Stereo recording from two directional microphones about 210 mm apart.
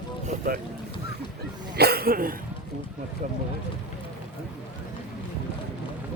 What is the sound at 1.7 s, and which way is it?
Speech, 50° right (ahead or behind).